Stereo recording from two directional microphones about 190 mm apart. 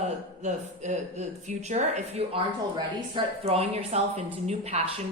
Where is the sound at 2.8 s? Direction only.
20° right (ahead or behind).